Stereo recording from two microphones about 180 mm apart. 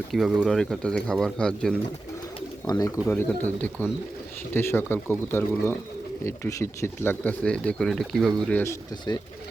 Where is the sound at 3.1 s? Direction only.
10° left (ahead or behind).